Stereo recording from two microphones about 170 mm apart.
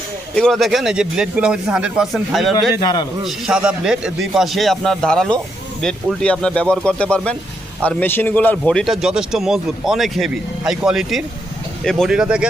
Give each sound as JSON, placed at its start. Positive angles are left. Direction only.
{"t": 0.3, "sound": "a man's voice", "side_deg": 0}
{"t": 2.8, "sound": "a man's voice", "side_deg": 20}
{"t": 3.2, "sound": "a man's voice", "side_deg": -5}